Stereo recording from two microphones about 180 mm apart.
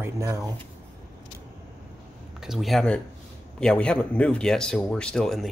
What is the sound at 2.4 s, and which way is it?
Speech, centre (ahead or behind).